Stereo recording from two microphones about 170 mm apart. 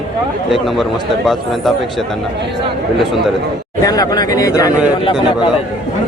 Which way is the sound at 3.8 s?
20° left (ahead or behind).